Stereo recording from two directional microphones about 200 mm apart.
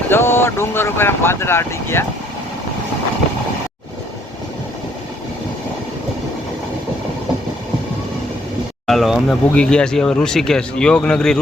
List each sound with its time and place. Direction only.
0.1 s speech: 10° left (ahead or behind)
8.9 s speech: centre (ahead or behind)